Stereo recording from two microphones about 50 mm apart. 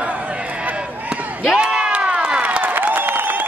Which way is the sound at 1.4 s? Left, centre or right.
Centre.